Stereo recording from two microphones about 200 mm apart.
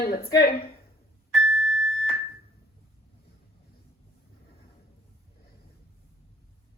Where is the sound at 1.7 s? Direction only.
Centre (ahead or behind).